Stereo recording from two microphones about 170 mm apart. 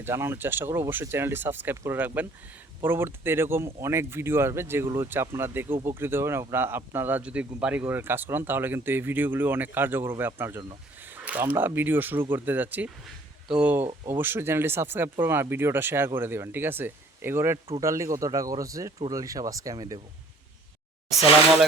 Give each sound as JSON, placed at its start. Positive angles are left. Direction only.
{"t": 0.0, "sound": "speech", "side_deg": -15}